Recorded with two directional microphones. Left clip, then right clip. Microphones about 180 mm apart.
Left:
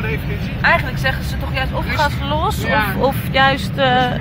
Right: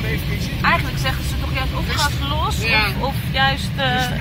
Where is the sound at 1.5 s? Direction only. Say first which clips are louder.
Left 4 dB; 35° left (ahead or behind).